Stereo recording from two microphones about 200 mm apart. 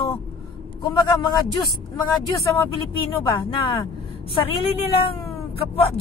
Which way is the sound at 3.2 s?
25° left (ahead or behind).